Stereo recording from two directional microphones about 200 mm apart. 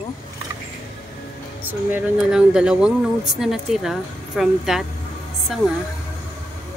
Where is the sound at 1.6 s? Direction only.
5° right (ahead or behind).